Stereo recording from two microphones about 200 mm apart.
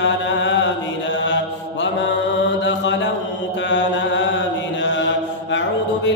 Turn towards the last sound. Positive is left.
turn(degrees=65)  # may be behind; listen again after turning